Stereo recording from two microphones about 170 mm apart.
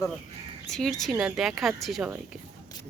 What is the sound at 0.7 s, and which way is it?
Speech, centre (ahead or behind).